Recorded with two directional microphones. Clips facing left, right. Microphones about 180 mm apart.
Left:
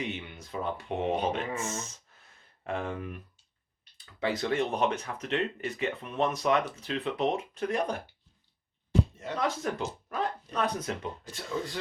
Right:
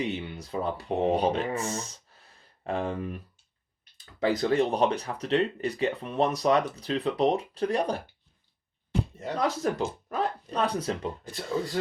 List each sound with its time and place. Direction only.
0.0 s speech: 35° right (ahead or behind)
9.2 s speech: 35° right (ahead or behind)